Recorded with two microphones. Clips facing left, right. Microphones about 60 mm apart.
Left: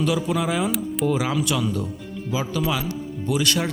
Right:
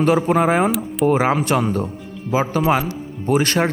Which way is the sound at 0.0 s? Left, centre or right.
Right.